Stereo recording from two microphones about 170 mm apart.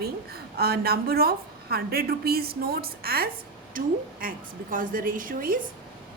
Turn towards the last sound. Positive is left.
turn(degrees=-55)  # may be behind; listen again after turning